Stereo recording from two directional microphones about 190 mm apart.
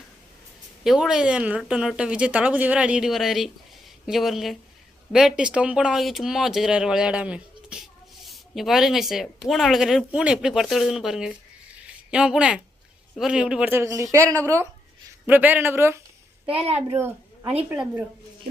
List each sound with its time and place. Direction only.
0.9 s a woman's voice: 5° right (ahead or behind)
16.5 s a child's voice: 30° right (ahead or behind)